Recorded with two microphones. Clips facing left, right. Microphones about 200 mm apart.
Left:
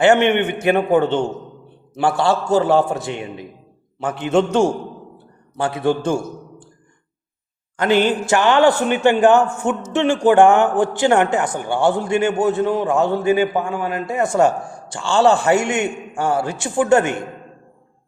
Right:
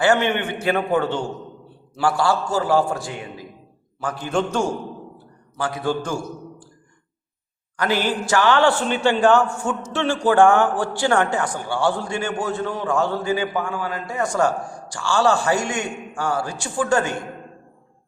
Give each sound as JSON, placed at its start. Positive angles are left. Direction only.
{"t": 0.0, "sound": "a man's voice", "side_deg": 25}
{"t": 7.8, "sound": "a man's voice", "side_deg": 20}